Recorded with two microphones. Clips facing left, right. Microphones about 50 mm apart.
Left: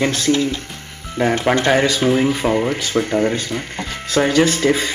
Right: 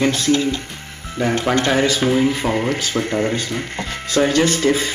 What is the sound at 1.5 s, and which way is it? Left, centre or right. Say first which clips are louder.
Speech: left 1 dB; centre.